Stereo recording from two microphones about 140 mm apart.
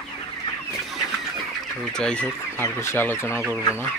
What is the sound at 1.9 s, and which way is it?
Speech, 5° left (ahead or behind).